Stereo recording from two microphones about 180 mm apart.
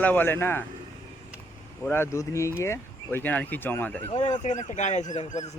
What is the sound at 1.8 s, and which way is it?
Speech, 15° left (ahead or behind).